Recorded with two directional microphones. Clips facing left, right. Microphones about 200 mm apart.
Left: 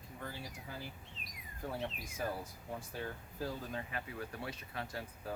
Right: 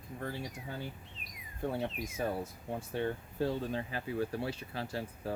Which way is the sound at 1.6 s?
30° right (ahead or behind).